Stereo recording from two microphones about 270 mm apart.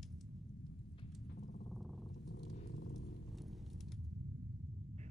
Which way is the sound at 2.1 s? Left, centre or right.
Left.